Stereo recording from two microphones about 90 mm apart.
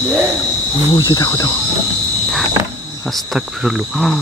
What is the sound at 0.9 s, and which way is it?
Speech, 50° left (ahead or behind).